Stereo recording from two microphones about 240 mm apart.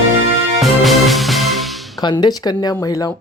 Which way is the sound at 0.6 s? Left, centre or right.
Centre.